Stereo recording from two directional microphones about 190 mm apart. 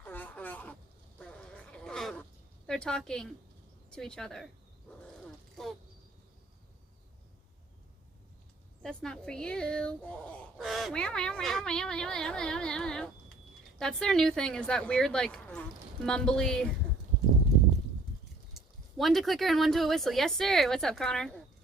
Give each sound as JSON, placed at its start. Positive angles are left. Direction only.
{"t": 0.0, "sound": "a sound", "side_deg": 10}
{"t": 2.6, "sound": "speech", "side_deg": 5}
{"t": 4.9, "sound": "wild animals", "side_deg": 5}
{"t": 5.6, "sound": "a sound", "side_deg": 0}
{"t": 8.8, "sound": "speech", "side_deg": 5}
{"t": 18.5, "sound": "speech", "side_deg": 0}